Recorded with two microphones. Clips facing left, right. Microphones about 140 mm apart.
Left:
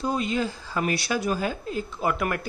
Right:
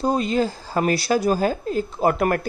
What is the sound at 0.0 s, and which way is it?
A man's voice, 35° right (ahead or behind).